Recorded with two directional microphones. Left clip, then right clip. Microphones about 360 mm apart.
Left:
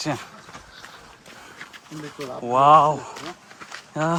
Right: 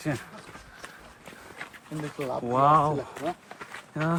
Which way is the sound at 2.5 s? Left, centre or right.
Centre.